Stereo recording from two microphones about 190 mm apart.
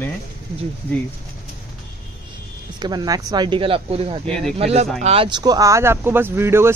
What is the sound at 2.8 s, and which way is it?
Speech, 20° right (ahead or behind).